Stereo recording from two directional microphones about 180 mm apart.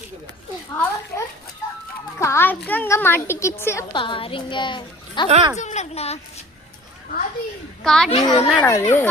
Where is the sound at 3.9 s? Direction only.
30° left (ahead or behind).